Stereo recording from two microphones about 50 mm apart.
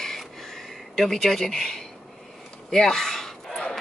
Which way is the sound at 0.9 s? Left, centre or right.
Centre.